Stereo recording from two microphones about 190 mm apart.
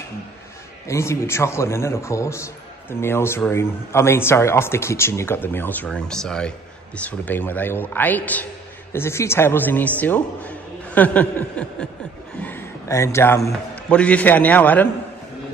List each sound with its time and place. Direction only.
0.8 s a man's voice: 15° left (ahead or behind)